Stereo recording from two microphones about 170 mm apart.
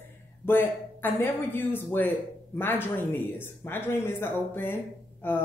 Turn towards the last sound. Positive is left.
turn(degrees=10)  # may be behind; listen again after turning